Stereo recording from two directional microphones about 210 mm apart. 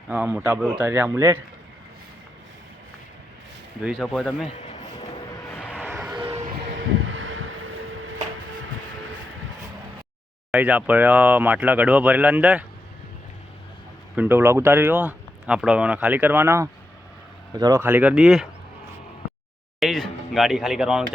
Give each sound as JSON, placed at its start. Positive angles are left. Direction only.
{"t": 0.1, "sound": "speech", "side_deg": -10}
{"t": 3.8, "sound": "speech", "side_deg": 0}
{"t": 5.5, "sound": "vehicle", "side_deg": -5}
{"t": 6.1, "sound": "a sound", "side_deg": -20}
{"t": 6.7, "sound": "a sound", "side_deg": -65}
{"t": 10.5, "sound": "speech", "side_deg": -5}
{"t": 14.2, "sound": "speech", "side_deg": -10}
{"t": 19.8, "sound": "speech", "side_deg": 0}